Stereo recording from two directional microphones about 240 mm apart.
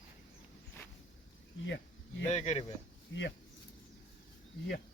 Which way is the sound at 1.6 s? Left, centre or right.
Left.